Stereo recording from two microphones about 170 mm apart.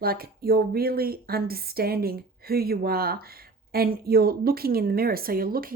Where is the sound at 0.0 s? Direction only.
65° right (ahead or behind).